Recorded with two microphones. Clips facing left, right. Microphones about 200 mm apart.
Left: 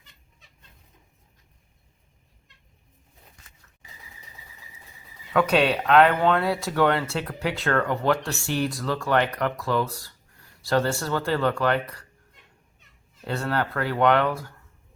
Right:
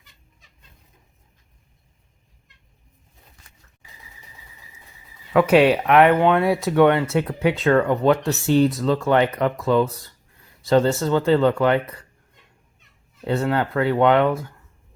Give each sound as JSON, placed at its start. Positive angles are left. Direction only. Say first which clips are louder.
{"t": 5.3, "sound": "speech", "louder": "right 6 dB", "side_deg": -20}
{"t": 13.2, "sound": "speech", "louder": "right 5 dB", "side_deg": -20}